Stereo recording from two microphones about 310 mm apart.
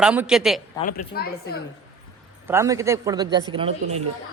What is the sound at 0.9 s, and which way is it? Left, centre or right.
Speech, left.